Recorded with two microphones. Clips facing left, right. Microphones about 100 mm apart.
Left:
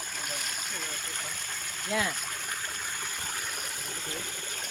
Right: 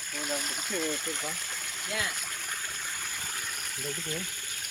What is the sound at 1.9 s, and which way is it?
Speech, 50° left (ahead or behind).